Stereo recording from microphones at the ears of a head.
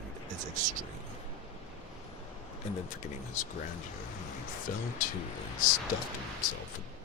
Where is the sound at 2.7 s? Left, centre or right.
Left.